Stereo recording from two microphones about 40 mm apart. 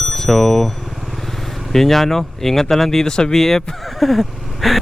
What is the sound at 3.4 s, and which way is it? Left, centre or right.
Speech, centre.